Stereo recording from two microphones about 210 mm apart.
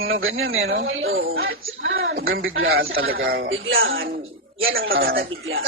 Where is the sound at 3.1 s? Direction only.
45° right (ahead or behind).